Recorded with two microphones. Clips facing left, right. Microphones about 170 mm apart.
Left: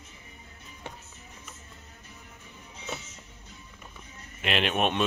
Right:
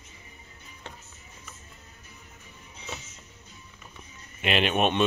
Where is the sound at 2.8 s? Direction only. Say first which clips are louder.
Left 2 dB; centre (ahead or behind).